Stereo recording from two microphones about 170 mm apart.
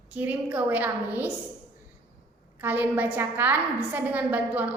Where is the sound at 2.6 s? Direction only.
10° right (ahead or behind).